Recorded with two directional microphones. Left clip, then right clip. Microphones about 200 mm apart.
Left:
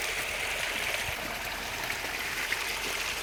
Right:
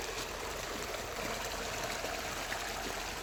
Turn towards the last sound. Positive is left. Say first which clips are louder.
# left 7 dB
turn(degrees=-40)  # may be behind; listen again after turning